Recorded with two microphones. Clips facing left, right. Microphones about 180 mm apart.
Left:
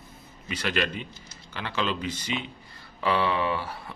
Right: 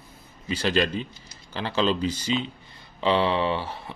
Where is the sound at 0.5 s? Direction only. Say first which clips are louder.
Right 5 dB; 30° right (ahead or behind).